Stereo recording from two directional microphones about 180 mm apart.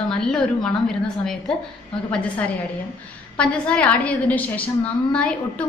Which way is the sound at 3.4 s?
5° left (ahead or behind).